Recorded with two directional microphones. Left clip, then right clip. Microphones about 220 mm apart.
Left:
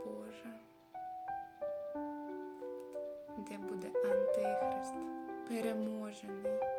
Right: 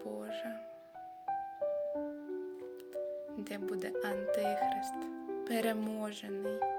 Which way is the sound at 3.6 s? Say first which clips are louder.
Left 1 dB; 10° left (ahead or behind).